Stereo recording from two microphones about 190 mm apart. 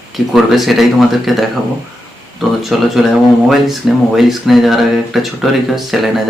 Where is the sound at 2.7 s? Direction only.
Centre (ahead or behind).